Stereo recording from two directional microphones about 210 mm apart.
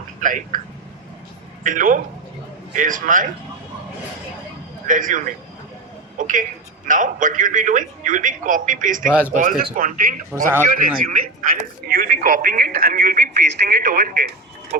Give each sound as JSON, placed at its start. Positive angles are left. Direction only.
{"t": 0.2, "sound": "speech", "side_deg": -40}
{"t": 1.6, "sound": "a man's voice", "side_deg": -40}
{"t": 4.9, "sound": "a man's voice", "side_deg": -40}